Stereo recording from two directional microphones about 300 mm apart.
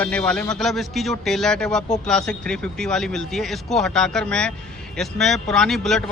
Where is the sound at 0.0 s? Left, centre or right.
Centre.